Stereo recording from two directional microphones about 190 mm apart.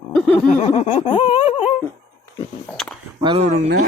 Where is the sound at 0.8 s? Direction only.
30° left (ahead or behind).